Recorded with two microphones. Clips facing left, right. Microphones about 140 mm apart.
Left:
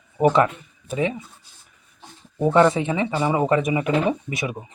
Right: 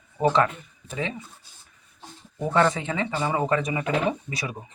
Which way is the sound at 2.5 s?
20° left (ahead or behind).